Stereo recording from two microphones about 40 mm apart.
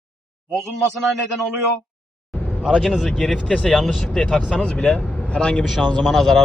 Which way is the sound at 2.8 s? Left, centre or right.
Centre.